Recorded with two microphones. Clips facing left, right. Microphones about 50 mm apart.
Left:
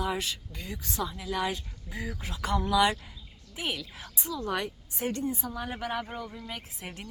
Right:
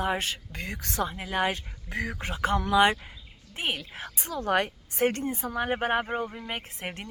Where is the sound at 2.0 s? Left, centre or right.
Right.